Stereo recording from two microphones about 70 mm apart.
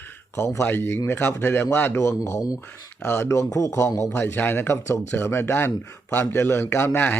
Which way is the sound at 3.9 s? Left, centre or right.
Left.